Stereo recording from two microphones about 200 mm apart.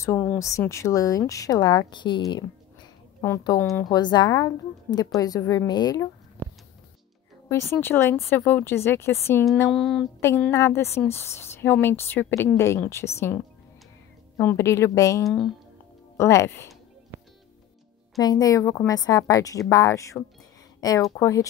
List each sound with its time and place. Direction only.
0.0 s a woman's voice: 10° left (ahead or behind)
7.4 s a woman's voice: 10° left (ahead or behind)
9.6 s a sound: 5° left (ahead or behind)
10.2 s a woman's voice: 10° left (ahead or behind)
15.2 s a sound: centre (ahead or behind)
16.2 s a woman's voice: 15° left (ahead or behind)
18.1 s a woman's voice: 20° left (ahead or behind)